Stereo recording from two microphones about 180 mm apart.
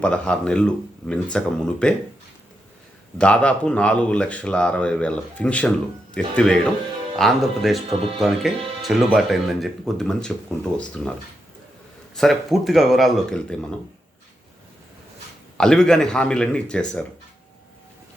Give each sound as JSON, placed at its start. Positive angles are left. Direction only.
{"t": 0.0, "sound": "speech", "side_deg": 5}
{"t": 3.2, "sound": "speech", "side_deg": 5}
{"t": 12.1, "sound": "speech", "side_deg": 0}
{"t": 15.5, "sound": "speech", "side_deg": 5}